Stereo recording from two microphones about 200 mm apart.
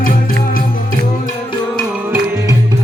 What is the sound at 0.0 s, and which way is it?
Music, 45° left (ahead or behind).